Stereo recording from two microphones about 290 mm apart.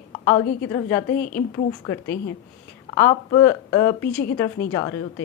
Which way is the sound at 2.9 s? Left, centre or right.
Centre.